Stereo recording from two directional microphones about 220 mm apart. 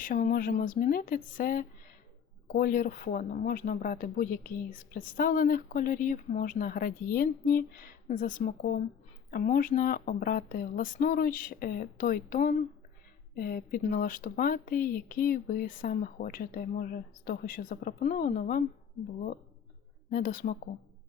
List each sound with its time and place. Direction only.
0.0 s speech: 40° left (ahead or behind)
20.1 s speech: 40° left (ahead or behind)